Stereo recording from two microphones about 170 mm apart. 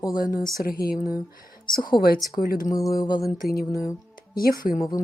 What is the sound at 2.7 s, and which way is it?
Speech, 20° left (ahead or behind).